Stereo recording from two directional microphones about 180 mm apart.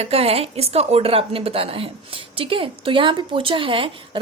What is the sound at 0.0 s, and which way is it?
Speech, 35° right (ahead or behind).